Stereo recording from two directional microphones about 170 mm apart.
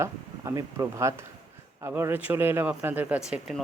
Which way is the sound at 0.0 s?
20° right (ahead or behind).